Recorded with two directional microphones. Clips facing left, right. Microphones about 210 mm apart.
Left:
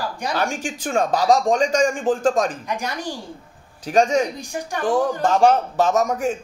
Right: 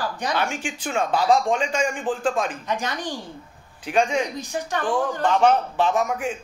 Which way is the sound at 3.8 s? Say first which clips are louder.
Left 4 dB; 40° left (ahead or behind).